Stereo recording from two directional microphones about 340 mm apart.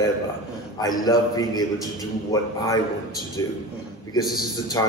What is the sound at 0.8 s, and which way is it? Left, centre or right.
A man's voice, centre.